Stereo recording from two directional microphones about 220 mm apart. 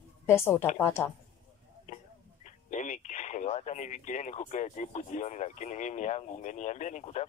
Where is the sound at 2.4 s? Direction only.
35° left (ahead or behind).